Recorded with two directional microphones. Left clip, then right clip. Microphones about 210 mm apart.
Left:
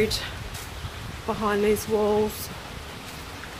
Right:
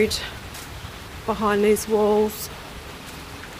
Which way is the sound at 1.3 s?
20° right (ahead or behind).